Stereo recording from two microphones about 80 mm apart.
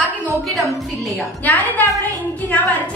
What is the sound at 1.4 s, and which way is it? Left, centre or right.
Speech, left.